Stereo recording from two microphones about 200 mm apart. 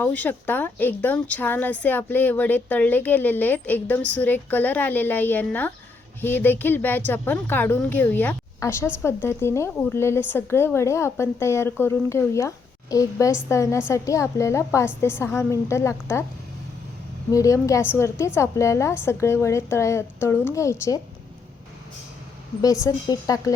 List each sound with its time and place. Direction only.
0.0 s a woman's voice: 10° left (ahead or behind)
17.3 s a woman's voice: 15° left (ahead or behind)
22.6 s a woman's voice: 15° left (ahead or behind)